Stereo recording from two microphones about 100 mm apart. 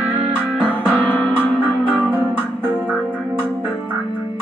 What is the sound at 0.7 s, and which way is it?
Music, 15° left (ahead or behind).